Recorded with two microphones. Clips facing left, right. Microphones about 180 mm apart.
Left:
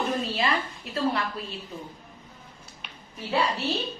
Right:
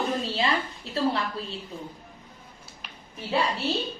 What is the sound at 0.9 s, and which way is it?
Speech, 30° right (ahead or behind).